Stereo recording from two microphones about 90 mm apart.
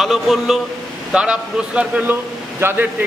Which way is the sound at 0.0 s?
Centre (ahead or behind).